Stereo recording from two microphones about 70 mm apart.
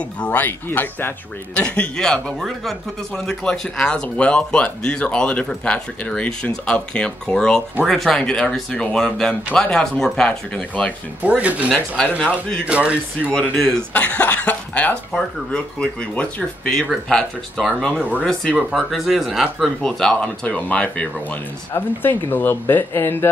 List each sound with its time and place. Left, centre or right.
0.2 s speech: left
1.6 s speech: centre
11.2 s speech: centre
13.3 s speech: centre
13.9 s speech: left
17.1 s speech: centre
19.8 s speech: centre
21.7 s speech: left